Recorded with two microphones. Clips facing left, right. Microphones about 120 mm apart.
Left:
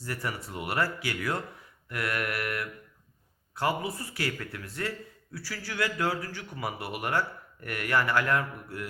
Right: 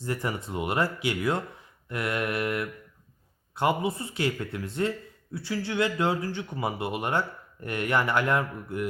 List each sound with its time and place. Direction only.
0.0 s speech: 20° right (ahead or behind)